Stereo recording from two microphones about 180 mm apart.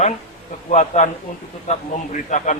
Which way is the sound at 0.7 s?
40° left (ahead or behind).